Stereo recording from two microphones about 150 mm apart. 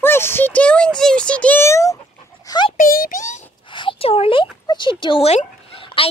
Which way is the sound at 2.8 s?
70° left (ahead or behind).